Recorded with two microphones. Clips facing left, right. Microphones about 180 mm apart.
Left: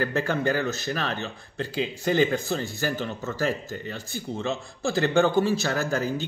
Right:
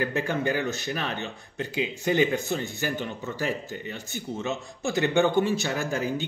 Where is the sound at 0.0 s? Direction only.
15° right (ahead or behind).